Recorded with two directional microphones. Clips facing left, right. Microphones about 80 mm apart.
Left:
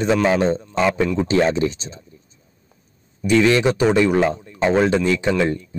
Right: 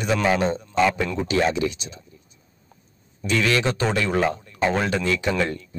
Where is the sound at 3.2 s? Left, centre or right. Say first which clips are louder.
Left 6 dB; left.